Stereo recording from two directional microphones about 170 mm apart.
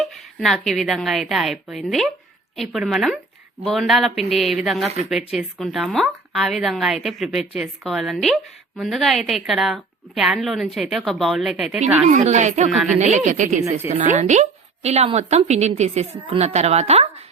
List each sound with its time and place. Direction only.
0.0 s speech: centre (ahead or behind)
12.0 s a woman's voice: 45° right (ahead or behind)
12.7 s speech: centre (ahead or behind)
13.1 s a woman's voice: 45° right (ahead or behind)